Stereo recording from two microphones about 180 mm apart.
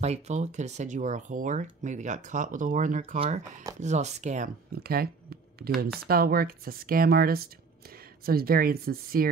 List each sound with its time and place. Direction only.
0.0 s speech: 40° right (ahead or behind)
4.7 s speech: 60° right (ahead or behind)